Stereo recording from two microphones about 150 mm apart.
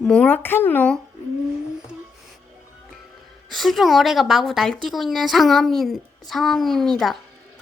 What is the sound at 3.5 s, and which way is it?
A child's voice, centre (ahead or behind).